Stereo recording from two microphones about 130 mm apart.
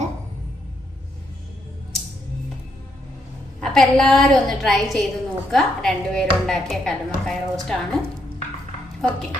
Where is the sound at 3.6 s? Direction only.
5° left (ahead or behind).